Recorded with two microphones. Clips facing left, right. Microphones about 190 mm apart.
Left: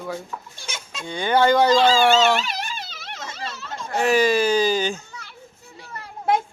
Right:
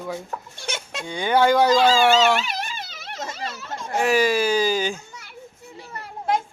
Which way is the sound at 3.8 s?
10° right (ahead or behind).